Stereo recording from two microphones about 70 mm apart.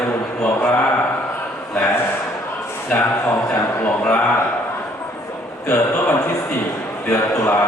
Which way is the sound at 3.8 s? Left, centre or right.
Left.